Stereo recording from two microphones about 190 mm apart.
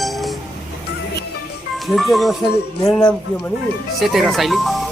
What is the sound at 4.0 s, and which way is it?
Speech, centre (ahead or behind).